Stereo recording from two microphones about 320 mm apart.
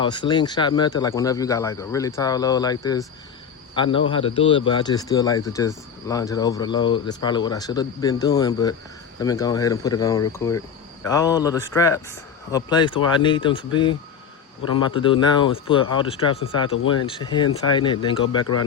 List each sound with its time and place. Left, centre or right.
0.0 s speech: centre
14.9 s speech: centre